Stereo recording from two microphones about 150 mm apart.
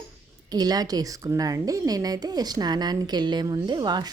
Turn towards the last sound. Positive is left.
turn(degrees=-30)  # may be behind; listen again after turning